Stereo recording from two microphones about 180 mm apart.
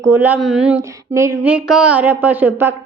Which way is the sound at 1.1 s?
15° right (ahead or behind).